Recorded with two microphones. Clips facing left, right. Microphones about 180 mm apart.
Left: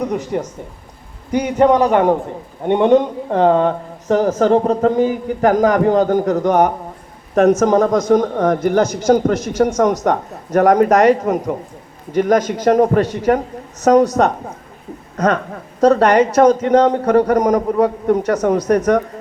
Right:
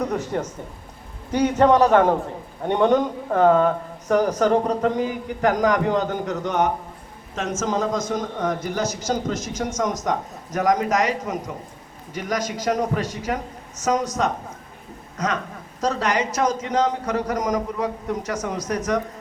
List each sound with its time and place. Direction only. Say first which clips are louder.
0.3 s a man's voice: left 4 dB; 15° left (ahead or behind); by 4.7 s 30° left (ahead or behind)
4.7 s a man's voice: left 7 dB; 40° left (ahead or behind); by 14.3 s 60° left (ahead or behind)
15.8 s a man's voice: left 11 dB; 55° left (ahead or behind)